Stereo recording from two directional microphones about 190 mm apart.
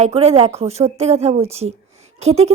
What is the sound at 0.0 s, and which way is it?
A woman's voice, 35° right (ahead or behind).